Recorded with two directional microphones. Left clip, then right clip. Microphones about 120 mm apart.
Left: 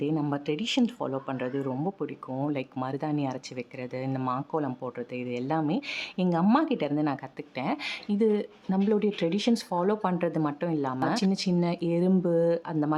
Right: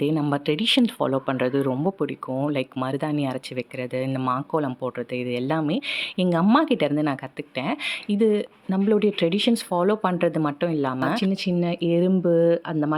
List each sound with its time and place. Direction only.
0.0 s speech: 25° right (ahead or behind)
0.9 s speech: 35° right (ahead or behind)
2.8 s speech: 15° right (ahead or behind)
8.9 s speech: 20° right (ahead or behind)
9.3 s speech: 5° right (ahead or behind)